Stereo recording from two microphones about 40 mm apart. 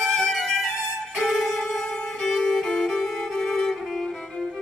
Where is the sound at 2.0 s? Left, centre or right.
Centre.